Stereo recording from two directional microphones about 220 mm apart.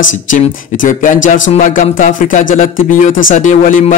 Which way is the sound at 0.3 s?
35° left (ahead or behind).